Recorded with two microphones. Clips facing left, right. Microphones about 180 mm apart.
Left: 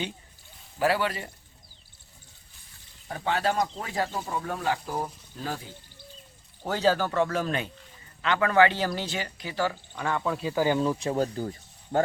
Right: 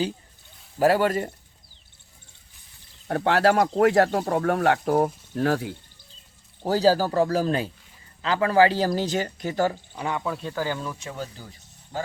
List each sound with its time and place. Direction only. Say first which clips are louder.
0.8 s speech: right 6 dB; 45° right (ahead or behind)
3.1 s speech: right 7 dB; 70° right (ahead or behind)
5.3 s speech: right 11 dB; 70° right (ahead or behind)
6.6 s speech: right 5 dB; 35° right (ahead or behind)
9.9 s speech: right 1 dB; 15° right (ahead or behind)
10.2 s speech: left 1 dB; centre (ahead or behind)
10.5 s speech: left 5 dB; 15° left (ahead or behind)
11.1 s speech: left 8 dB; 45° left (ahead or behind)